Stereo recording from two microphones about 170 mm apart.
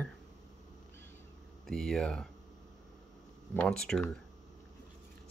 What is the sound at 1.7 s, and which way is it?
Speech, 5° left (ahead or behind).